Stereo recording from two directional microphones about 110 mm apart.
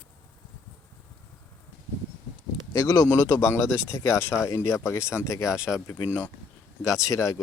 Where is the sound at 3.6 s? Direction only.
10° right (ahead or behind).